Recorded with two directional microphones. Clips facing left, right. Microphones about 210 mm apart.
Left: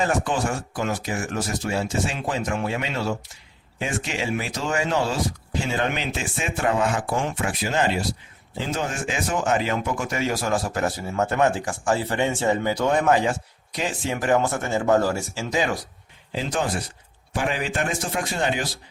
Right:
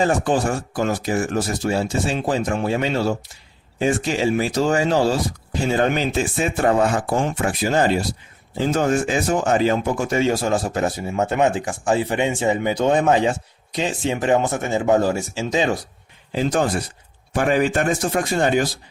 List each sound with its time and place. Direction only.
0.0 s speech: 35° right (ahead or behind)
16.3 s speech: 45° right (ahead or behind)